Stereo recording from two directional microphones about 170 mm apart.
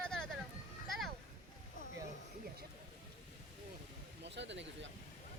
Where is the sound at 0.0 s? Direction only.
5° left (ahead or behind).